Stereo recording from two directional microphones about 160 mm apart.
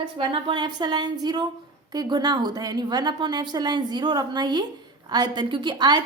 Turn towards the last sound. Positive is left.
turn(degrees=-25)  # may be behind; listen again after turning